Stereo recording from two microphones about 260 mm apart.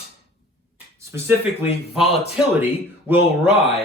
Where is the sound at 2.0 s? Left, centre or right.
Left.